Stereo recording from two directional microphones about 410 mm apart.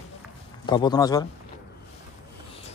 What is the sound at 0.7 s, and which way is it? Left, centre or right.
Speech, centre.